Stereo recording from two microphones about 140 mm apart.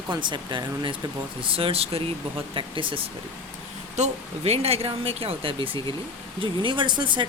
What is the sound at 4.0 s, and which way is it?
Speech, 50° right (ahead or behind).